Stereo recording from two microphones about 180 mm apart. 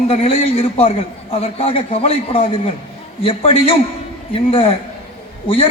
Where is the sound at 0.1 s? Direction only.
30° left (ahead or behind).